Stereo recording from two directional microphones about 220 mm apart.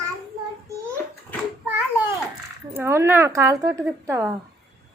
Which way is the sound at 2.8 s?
10° right (ahead or behind).